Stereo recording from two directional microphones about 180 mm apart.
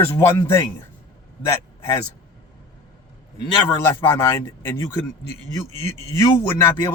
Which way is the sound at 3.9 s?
15° left (ahead or behind).